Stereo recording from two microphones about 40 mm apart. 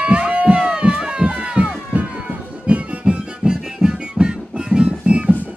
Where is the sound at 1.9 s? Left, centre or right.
Right.